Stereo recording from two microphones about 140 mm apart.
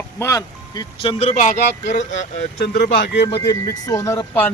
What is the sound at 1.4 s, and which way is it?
Speech, 65° left (ahead or behind).